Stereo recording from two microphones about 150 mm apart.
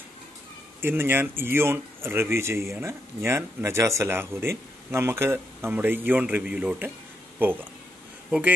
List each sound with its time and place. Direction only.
0.7 s speech: 15° right (ahead or behind)